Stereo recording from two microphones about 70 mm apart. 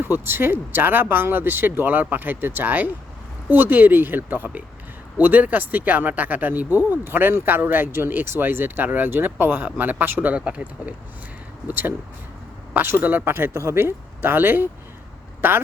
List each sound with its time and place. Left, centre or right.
0.0 s speech: right
13.0 s speech: right